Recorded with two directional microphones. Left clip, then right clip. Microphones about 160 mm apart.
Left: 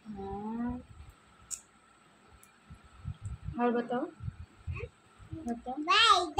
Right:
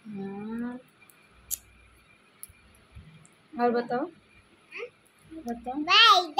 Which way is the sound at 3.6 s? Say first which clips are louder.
Right 5 dB; 25° right (ahead or behind).